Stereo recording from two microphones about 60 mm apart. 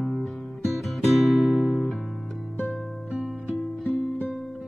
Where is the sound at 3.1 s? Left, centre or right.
Centre.